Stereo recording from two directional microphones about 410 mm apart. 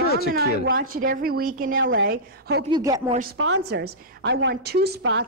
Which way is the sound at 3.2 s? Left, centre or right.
Right.